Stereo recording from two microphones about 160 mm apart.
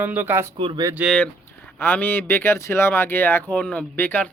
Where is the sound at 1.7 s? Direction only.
10° left (ahead or behind).